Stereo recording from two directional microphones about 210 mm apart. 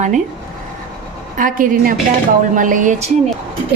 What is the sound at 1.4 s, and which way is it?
A woman's voice, 40° right (ahead or behind).